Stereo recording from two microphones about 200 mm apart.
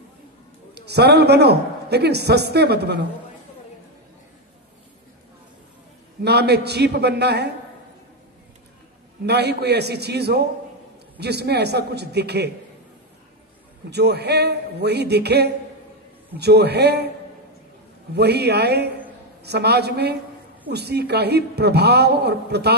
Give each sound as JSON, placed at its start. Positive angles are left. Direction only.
{"t": 0.7, "sound": "a man's voice", "side_deg": -55}
{"t": 6.2, "sound": "a man's voice", "side_deg": -55}
{"t": 9.2, "sound": "a man's voice", "side_deg": -55}
{"t": 13.8, "sound": "a man's voice", "side_deg": -55}
{"t": 18.1, "sound": "a man's voice", "side_deg": -55}